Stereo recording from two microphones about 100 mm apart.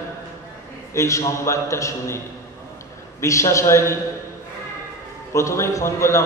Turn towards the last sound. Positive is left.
turn(degrees=30)  # may be behind; listen again after turning